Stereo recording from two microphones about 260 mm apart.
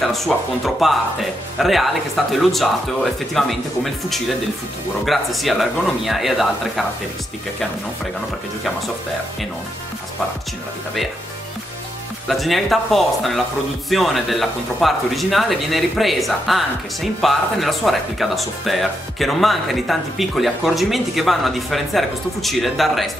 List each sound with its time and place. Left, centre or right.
0.0 s speech: centre
12.3 s speech: centre